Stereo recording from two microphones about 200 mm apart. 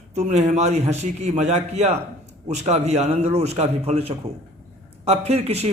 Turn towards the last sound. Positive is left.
turn(degrees=-30)  # may be behind; listen again after turning